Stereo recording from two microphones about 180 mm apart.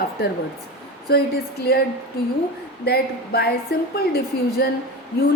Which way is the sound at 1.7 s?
60° left (ahead or behind).